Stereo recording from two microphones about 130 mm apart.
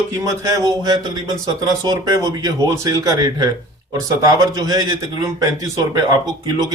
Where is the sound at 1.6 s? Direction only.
25° right (ahead or behind).